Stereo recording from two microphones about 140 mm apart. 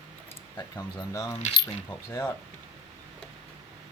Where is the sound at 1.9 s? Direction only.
15° left (ahead or behind).